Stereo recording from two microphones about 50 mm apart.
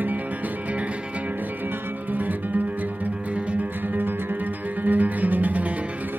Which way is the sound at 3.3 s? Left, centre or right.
Right.